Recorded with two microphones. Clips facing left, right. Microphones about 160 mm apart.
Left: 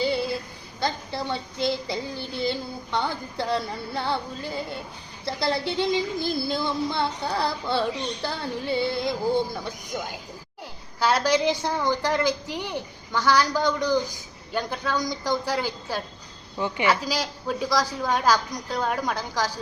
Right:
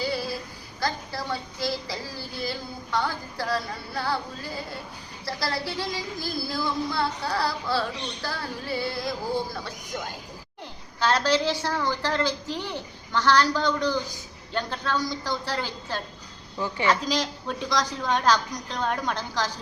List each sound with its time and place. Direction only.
0.0 s female singing: 25° left (ahead or behind)
0.8 s child singing: 25° left (ahead or behind)
9.9 s a woman's voice: 10° left (ahead or behind)